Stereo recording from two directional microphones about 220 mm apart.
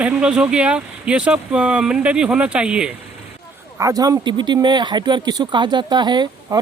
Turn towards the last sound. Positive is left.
turn(degrees=-20)  # may be behind; listen again after turning